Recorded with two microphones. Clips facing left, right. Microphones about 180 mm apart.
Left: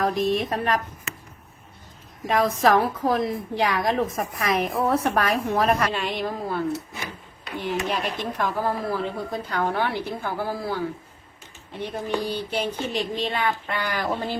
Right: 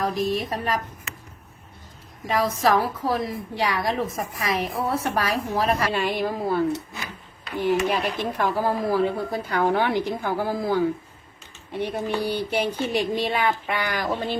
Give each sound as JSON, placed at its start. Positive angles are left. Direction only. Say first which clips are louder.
{"t": 0.0, "sound": "a woman's voice", "louder": "left 2 dB", "side_deg": 0}
{"t": 2.2, "sound": "a woman's voice", "louder": "left 2 dB", "side_deg": 0}
{"t": 7.7, "sound": "speech", "louder": "right 4 dB", "side_deg": -10}
{"t": 11.8, "sound": "speech", "louder": "right 2 dB", "side_deg": -10}